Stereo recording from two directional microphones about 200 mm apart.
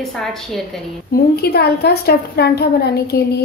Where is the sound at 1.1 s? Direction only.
50° left (ahead or behind).